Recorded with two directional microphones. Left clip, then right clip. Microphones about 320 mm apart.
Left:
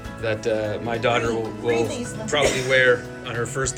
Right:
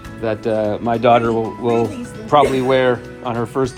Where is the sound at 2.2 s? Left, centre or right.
Centre.